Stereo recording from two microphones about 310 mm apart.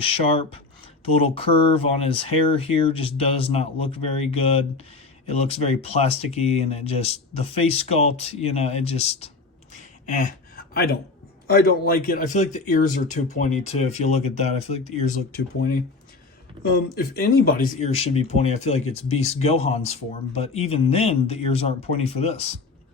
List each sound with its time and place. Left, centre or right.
0.0 s speech: centre
9.7 s a sound: left
11.4 s speech: left